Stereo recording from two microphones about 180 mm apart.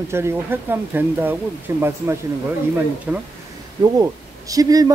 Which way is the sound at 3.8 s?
20° right (ahead or behind).